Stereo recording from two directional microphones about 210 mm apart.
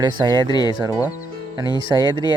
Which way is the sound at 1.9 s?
20° right (ahead or behind).